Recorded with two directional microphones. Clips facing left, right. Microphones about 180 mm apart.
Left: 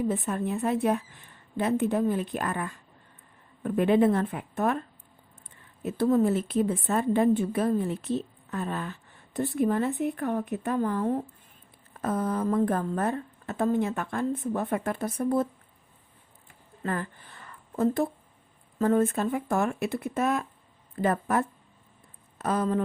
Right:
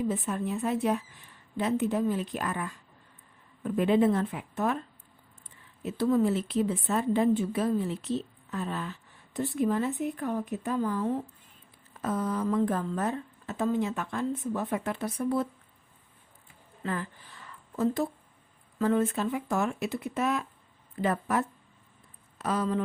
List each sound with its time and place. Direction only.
0.1 s a woman's voice: 55° left (ahead or behind)
5.8 s a woman's voice: 45° left (ahead or behind)
16.8 s a woman's voice: 50° left (ahead or behind)